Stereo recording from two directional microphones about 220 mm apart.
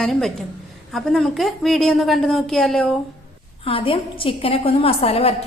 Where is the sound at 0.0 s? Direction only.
Centre (ahead or behind).